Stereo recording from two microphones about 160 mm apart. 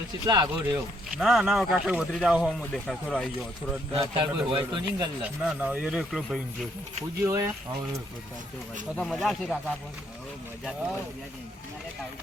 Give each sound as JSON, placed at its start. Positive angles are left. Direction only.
{"t": 0.3, "sound": "speech", "side_deg": -25}
{"t": 1.2, "sound": "speech", "side_deg": 0}
{"t": 3.9, "sound": "a man's voice", "side_deg": -35}
{"t": 5.4, "sound": "speech", "side_deg": -5}
{"t": 7.2, "sound": "speech", "side_deg": -15}
{"t": 9.0, "sound": "speech", "side_deg": 0}